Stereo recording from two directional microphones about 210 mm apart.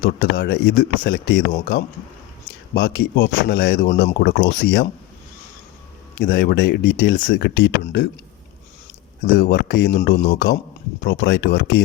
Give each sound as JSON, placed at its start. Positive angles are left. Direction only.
{"t": 0.0, "sound": "speech", "side_deg": 50}
{"t": 2.7, "sound": "speech", "side_deg": 55}
{"t": 6.1, "sound": "speech", "side_deg": 50}
{"t": 9.2, "sound": "speech", "side_deg": 50}